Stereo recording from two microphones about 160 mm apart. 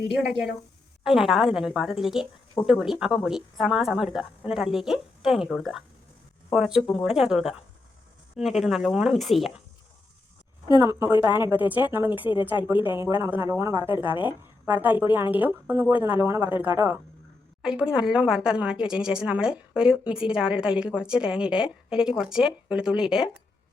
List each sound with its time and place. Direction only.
0.1 s a woman's voice: centre (ahead or behind)
10.8 s a woman's voice: 20° right (ahead or behind)